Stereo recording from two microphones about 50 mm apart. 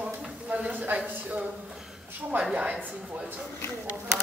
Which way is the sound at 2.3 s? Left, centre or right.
Right.